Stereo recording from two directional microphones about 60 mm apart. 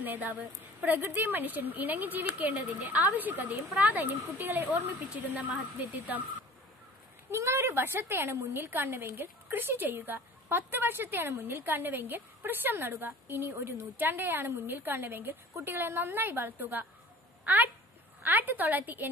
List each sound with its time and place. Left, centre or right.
0.0 s a woman's voice: right
4.6 s a woman's voice: right
7.2 s a woman's voice: right